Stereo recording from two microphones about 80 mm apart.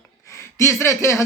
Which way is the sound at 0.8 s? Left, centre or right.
Left.